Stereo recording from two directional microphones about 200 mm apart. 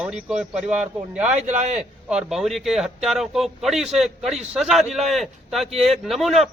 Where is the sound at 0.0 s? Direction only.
5° right (ahead or behind).